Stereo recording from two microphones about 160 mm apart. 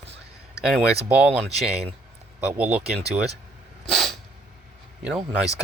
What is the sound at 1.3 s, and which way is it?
Speech, 40° right (ahead or behind).